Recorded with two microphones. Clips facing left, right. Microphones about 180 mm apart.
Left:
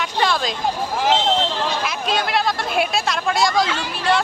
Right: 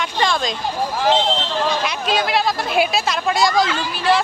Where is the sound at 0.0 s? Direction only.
5° left (ahead or behind).